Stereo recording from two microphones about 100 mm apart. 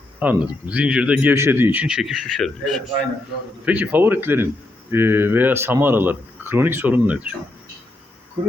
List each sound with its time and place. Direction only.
0.2 s speech: 15° right (ahead or behind); by 2.8 s 5° left (ahead or behind)
3.7 s speech: 20° right (ahead or behind)